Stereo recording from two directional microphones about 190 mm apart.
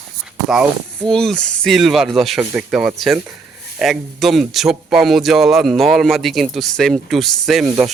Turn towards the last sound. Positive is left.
turn(degrees=0)  # may be behind; listen again after turning